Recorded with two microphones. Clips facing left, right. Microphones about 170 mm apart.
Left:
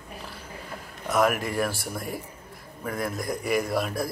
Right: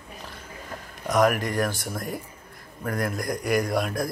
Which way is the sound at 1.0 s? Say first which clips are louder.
Right 2 dB; centre (ahead or behind).